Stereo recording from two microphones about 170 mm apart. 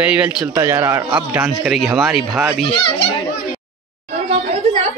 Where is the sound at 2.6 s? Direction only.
30° left (ahead or behind).